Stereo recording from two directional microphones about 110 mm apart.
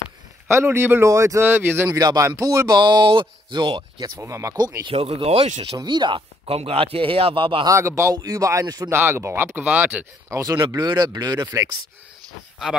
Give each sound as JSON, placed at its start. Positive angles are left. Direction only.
{"t": 0.5, "sound": "a man's voice", "side_deg": -25}
{"t": 1.9, "sound": "speech", "side_deg": -35}
{"t": 2.8, "sound": "speech", "side_deg": -45}
{"t": 4.2, "sound": "a man's voice", "side_deg": -30}
{"t": 4.9, "sound": "speech", "side_deg": -65}
{"t": 5.8, "sound": "speech", "side_deg": -45}
{"t": 7.6, "sound": "speech", "side_deg": -25}
{"t": 8.9, "sound": "speech", "side_deg": -20}
{"t": 10.3, "sound": "speech", "side_deg": -30}